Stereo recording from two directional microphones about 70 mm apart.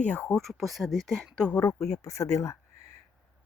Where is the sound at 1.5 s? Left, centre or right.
Left.